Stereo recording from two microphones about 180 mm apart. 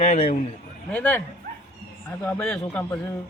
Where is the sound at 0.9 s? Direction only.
10° left (ahead or behind).